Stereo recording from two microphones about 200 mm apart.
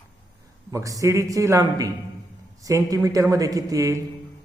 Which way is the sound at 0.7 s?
15° right (ahead or behind).